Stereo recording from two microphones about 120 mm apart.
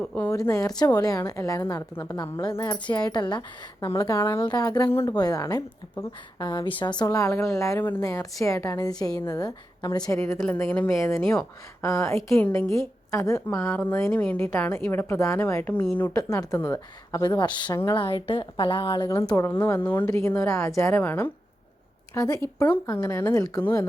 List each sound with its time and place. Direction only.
0.0 s a woman's voice: 5° left (ahead or behind)
0.3 s a woman's voice: 25° left (ahead or behind)
2.4 s a woman's voice: 35° left (ahead or behind)
4.4 s a woman's voice: 35° left (ahead or behind)
10.4 s a woman's voice: 10° left (ahead or behind); by 13.4 s 25° left (ahead or behind)
13.7 s a woman's voice: 15° left (ahead or behind)
16.1 s a woman's voice: 30° left (ahead or behind)
19.6 s a woman's voice: 20° left (ahead or behind)
22.6 s a woman's voice: 15° left (ahead or behind)